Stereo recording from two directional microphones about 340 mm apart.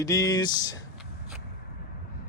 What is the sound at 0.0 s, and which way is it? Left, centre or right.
Speech, centre.